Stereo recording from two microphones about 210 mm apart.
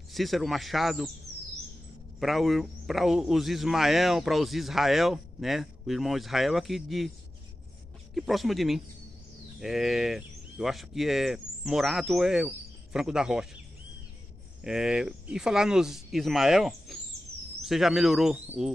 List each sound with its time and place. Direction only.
0.1 s a man's voice: centre (ahead or behind)
2.1 s a man's voice: centre (ahead or behind)
8.1 s a man's voice: centre (ahead or behind)
14.6 s a man's voice: 5° right (ahead or behind)